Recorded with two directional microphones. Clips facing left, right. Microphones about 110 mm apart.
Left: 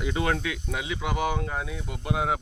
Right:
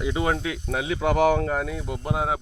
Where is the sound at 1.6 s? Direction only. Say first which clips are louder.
Right 3 dB; 40° right (ahead or behind).